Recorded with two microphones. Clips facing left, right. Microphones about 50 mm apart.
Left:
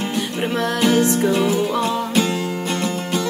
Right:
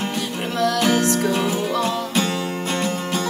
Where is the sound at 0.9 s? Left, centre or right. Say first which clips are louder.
Left 2 dB; left.